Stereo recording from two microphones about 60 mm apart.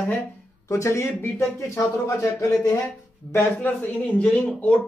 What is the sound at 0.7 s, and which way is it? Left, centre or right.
Speech, left.